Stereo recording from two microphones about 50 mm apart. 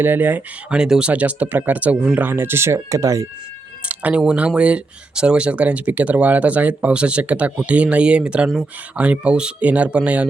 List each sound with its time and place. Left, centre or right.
0.0 s speech: right
0.7 s speech: centre
1.1 s speech: right
2.3 s speech: right
3.8 s a sound: right
4.4 s speech: right